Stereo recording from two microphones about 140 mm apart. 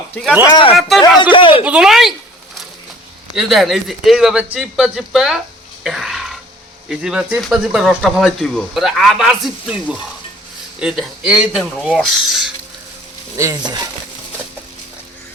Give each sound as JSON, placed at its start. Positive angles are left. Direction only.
{"t": 0.4, "sound": "speech", "side_deg": 30}
{"t": 0.8, "sound": "speech", "side_deg": 0}
{"t": 1.2, "sound": "speech", "side_deg": 35}
{"t": 1.6, "sound": "speech", "side_deg": -5}
{"t": 3.3, "sound": "speech", "side_deg": 0}
{"t": 5.8, "sound": "throat clearing", "side_deg": 0}
{"t": 6.8, "sound": "speech", "side_deg": -5}
{"t": 13.3, "sound": "speech", "side_deg": -20}